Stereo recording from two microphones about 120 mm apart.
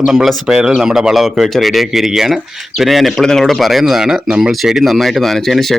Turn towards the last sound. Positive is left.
turn(degrees=0)  # may be behind; listen again after turning